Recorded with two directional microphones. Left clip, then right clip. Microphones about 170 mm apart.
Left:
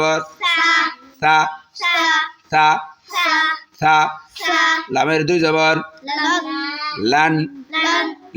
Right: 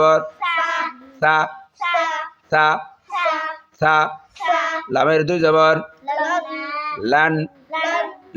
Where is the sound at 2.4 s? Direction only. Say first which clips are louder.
Left 1 dB; 10° right (ahead or behind).